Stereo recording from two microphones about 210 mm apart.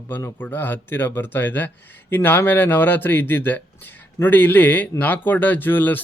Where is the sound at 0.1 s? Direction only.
10° left (ahead or behind).